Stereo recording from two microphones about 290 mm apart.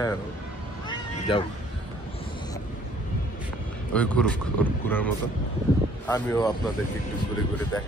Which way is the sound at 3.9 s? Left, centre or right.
Centre.